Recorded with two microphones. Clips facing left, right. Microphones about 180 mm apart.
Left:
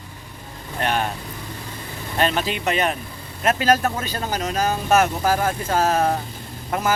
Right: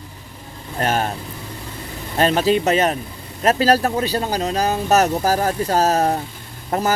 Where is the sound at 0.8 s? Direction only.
40° right (ahead or behind).